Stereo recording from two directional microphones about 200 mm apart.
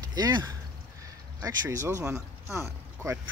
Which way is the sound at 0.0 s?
20° right (ahead or behind).